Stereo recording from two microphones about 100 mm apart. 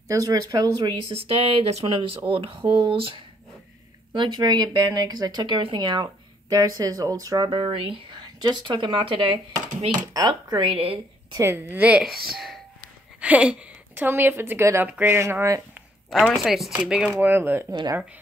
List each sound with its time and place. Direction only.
0.1 s a woman's voice: 35° right (ahead or behind)
1.1 s speech: 70° right (ahead or behind); by 1.9 s 90° right
1.9 s speech: 60° right (ahead or behind)
4.1 s speech: 45° right (ahead or behind)
5.6 s speech: 55° right (ahead or behind)
6.0 s speech: 35° right (ahead or behind)
7.4 s speech: 60° right (ahead or behind)
9.8 s speech: 40° right (ahead or behind)
10.7 s speech: 70° right (ahead or behind)
11.5 s a woman's voice: 20° right (ahead or behind)
12.0 s speech: centre (ahead or behind)
13.2 s a woman's voice: 15° right (ahead or behind); by 15.6 s 30° right (ahead or behind)
16.1 s a woman's voice: centre (ahead or behind)
17.2 s a woman's voice: 20° right (ahead or behind)